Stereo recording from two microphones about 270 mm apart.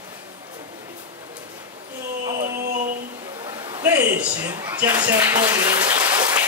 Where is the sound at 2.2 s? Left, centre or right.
Centre.